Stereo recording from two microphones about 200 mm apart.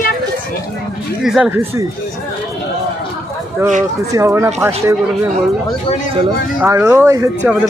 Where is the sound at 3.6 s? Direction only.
10° right (ahead or behind).